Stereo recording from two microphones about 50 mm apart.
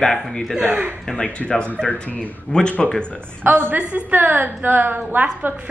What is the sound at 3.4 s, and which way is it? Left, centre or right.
A woman's voice, right.